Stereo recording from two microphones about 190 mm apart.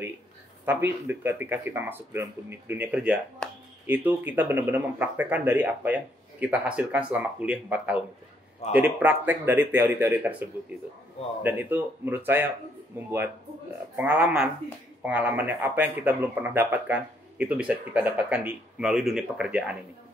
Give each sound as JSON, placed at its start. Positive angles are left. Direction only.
{"t": 0.7, "sound": "speech", "side_deg": -10}
{"t": 3.4, "sound": "a sound", "side_deg": 5}
{"t": 3.8, "sound": "speech", "side_deg": -10}
{"t": 8.6, "sound": "speech", "side_deg": 35}
{"t": 9.0, "sound": "speech", "side_deg": -10}
{"t": 11.4, "sound": "speech", "side_deg": -10}